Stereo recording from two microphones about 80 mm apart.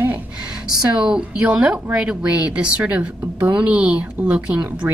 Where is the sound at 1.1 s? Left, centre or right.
Centre.